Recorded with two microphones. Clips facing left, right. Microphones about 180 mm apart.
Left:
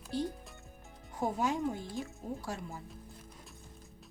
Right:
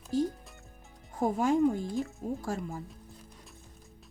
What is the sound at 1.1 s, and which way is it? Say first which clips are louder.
Speech: right 6 dB; 50° right (ahead or behind).